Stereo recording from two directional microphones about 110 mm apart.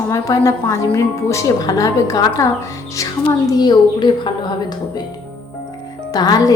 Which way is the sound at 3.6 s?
40° left (ahead or behind).